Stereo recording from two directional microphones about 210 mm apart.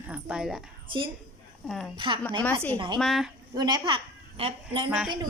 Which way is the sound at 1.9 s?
20° right (ahead or behind).